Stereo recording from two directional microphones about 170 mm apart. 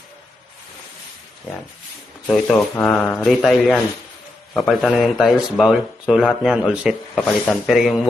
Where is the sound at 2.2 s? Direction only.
Centre (ahead or behind).